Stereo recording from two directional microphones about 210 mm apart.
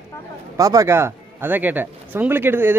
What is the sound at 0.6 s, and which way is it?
Speech, 15° right (ahead or behind).